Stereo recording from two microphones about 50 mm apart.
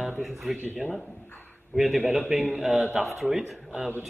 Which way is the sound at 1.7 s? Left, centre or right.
Centre.